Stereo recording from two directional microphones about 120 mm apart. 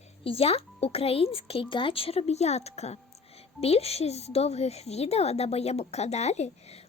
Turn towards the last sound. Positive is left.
turn(degrees=65)  # may be behind; listen again after turning